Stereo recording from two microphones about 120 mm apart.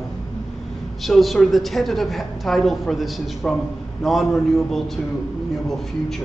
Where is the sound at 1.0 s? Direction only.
Centre (ahead or behind).